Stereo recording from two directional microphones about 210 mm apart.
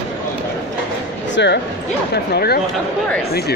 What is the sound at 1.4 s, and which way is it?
Speech, 55° left (ahead or behind).